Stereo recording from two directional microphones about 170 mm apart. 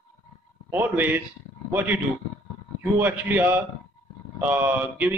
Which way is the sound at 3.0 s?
10° right (ahead or behind).